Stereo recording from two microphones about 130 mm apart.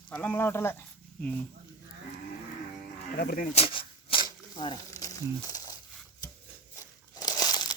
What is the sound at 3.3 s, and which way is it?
Speech, 90° left.